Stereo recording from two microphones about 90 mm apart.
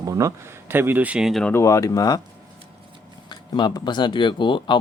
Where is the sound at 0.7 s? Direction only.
25° right (ahead or behind).